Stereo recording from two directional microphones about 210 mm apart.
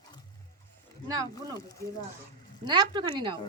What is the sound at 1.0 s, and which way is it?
Speech, 15° right (ahead or behind).